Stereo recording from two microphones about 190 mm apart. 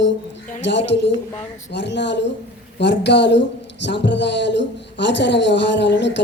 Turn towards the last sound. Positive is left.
turn(degrees=65)  # may be behind; listen again after turning